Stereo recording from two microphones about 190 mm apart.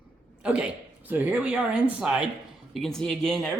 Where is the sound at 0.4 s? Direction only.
5° right (ahead or behind).